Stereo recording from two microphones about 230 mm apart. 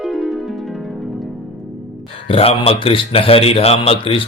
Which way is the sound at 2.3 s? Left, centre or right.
Left.